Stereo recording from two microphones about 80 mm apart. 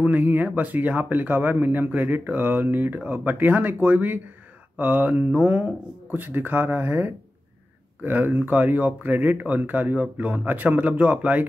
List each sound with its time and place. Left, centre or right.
0.0 s speech: right